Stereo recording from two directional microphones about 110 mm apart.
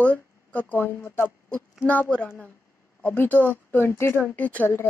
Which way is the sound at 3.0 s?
20° left (ahead or behind).